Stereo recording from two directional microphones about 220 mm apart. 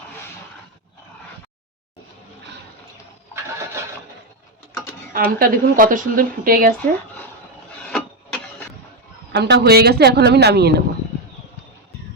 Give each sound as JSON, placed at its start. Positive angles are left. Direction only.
{"t": 5.1, "sound": "a woman's voice", "side_deg": -40}
{"t": 7.9, "sound": "printer", "side_deg": 5}
{"t": 9.3, "sound": "speech", "side_deg": -50}